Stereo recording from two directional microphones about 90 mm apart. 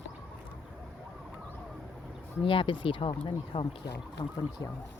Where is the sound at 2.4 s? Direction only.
70° left (ahead or behind).